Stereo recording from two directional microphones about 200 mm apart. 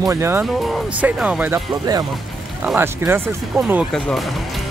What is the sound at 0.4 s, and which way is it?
Speech, centre (ahead or behind).